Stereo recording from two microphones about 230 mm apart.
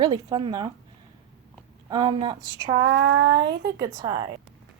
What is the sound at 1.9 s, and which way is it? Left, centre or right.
A woman's voice, right.